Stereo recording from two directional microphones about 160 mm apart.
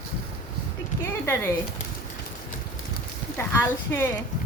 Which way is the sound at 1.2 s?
15° left (ahead or behind).